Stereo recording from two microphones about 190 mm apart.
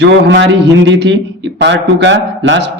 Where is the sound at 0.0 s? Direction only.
70° right (ahead or behind).